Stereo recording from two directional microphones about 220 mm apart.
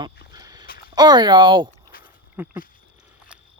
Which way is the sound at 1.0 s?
20° right (ahead or behind).